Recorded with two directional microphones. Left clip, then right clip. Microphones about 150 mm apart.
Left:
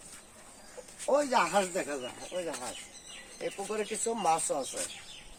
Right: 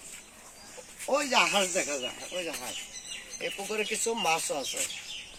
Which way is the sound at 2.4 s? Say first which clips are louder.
Right 1 dB; 15° left (ahead or behind).